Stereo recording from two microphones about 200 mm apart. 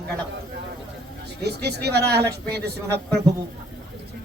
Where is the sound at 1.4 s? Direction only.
55° right (ahead or behind).